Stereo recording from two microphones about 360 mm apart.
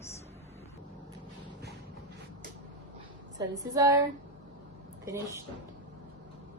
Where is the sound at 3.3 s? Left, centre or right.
Centre.